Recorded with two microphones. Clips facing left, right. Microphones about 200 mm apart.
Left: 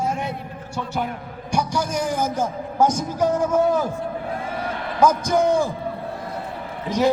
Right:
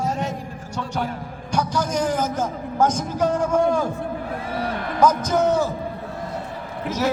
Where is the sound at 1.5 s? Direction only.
10° left (ahead or behind).